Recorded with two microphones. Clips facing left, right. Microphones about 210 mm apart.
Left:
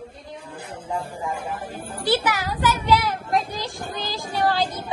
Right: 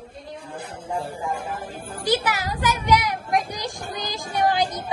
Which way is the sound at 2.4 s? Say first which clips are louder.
Left 1 dB; 45° right (ahead or behind).